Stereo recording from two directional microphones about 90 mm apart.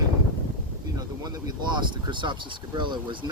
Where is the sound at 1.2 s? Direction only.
45° right (ahead or behind).